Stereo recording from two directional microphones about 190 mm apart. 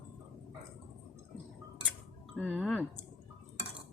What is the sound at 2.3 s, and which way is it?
Speech, 5° left (ahead or behind).